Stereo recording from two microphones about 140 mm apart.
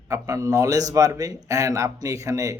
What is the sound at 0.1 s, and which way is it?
A man's voice, 25° right (ahead or behind).